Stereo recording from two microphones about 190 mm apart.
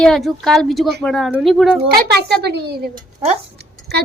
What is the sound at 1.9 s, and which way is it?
A child's voice, 55° right (ahead or behind).